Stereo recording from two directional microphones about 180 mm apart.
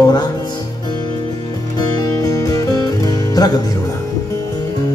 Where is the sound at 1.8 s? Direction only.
20° left (ahead or behind).